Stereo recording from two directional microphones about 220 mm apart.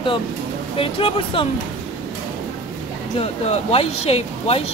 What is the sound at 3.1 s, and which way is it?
Speech, 30° left (ahead or behind).